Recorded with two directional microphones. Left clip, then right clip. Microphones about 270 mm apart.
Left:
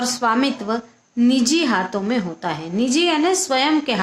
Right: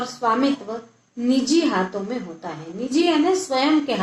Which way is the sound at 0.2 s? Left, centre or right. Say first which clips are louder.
Right 1 dB; left.